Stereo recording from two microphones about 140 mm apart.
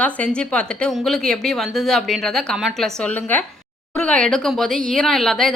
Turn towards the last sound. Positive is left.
turn(degrees=5)  # may be behind; listen again after turning